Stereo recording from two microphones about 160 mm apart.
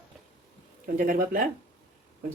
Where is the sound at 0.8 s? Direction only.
60° right (ahead or behind).